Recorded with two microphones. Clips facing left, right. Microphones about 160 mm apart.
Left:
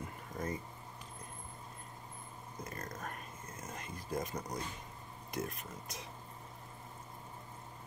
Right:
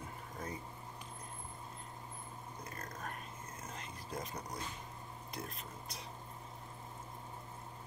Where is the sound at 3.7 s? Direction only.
50° left (ahead or behind).